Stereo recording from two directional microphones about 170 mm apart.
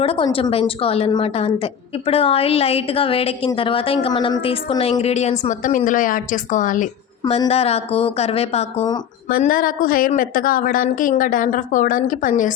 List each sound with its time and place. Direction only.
0.0 s a woman's voice: 35° left (ahead or behind); by 6.8 s 50° left (ahead or behind)
7.3 s a woman's voice: 35° left (ahead or behind)
9.3 s a woman's voice: 55° left (ahead or behind)